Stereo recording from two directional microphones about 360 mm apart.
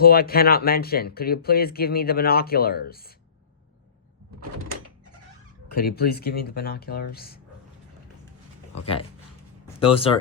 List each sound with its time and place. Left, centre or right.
0.0 s speech: left
5.7 s speech: left
8.7 s speech: centre